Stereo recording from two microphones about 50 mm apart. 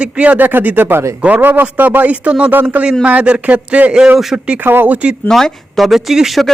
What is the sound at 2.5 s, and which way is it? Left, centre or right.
Speech, right.